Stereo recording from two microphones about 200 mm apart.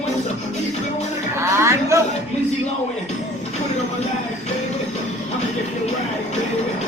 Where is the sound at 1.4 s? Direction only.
15° right (ahead or behind).